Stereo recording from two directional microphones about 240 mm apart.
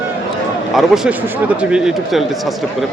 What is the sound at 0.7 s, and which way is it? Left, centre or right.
Speech, centre.